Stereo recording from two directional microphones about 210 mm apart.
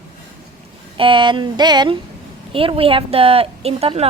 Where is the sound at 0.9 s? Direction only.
25° right (ahead or behind).